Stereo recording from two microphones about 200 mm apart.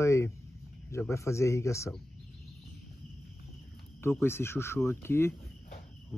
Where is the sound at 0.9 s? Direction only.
15° left (ahead or behind).